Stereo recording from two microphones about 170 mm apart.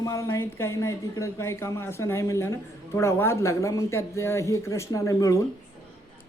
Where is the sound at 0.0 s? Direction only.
20° left (ahead or behind).